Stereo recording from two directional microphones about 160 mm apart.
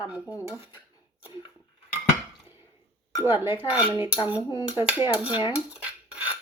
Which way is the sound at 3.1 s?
15° right (ahead or behind).